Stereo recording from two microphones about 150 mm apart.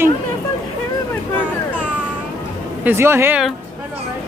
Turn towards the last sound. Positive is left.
turn(degrees=-15)  # may be behind; listen again after turning